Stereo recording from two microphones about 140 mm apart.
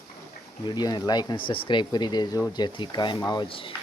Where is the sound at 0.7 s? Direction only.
30° left (ahead or behind).